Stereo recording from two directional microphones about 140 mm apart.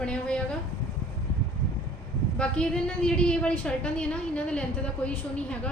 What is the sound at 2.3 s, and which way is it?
A woman's voice, 5° left (ahead or behind).